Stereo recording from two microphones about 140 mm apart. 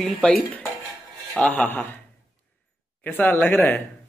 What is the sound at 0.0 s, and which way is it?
Speech, 5° left (ahead or behind).